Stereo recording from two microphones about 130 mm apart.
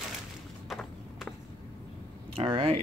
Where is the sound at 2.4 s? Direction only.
45° right (ahead or behind).